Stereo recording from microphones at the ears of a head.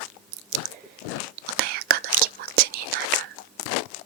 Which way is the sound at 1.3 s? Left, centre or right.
Right.